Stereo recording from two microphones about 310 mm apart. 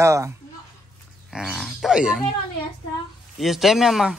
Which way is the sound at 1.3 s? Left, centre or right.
Centre.